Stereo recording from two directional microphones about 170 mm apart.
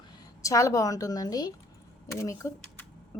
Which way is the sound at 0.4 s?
20° left (ahead or behind).